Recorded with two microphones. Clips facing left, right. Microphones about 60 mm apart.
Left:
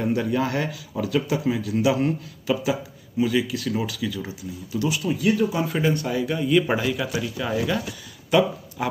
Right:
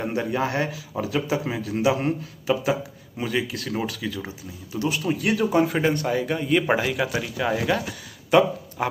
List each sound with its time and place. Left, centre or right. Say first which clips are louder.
0.0 s a man's voice: left 2 dB; right
5.2 s speech: left 1 dB; right
5.6 s speech: right 2 dB; right